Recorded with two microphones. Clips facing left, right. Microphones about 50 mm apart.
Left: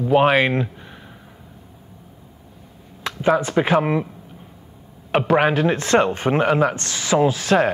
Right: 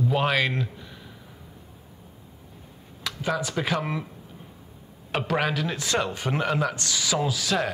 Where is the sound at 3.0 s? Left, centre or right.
Left.